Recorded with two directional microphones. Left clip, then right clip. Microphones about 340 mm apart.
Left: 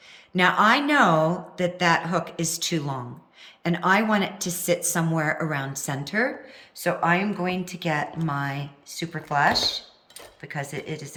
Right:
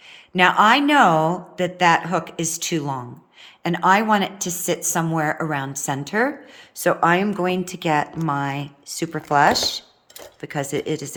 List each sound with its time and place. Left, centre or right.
0.3 s speech: centre